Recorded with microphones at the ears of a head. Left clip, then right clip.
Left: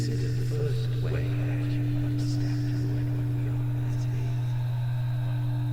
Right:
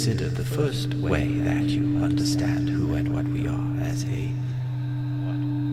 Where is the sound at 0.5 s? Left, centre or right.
Right.